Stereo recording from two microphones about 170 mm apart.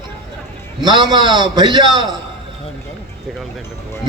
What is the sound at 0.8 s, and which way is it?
A man's voice, 25° right (ahead or behind).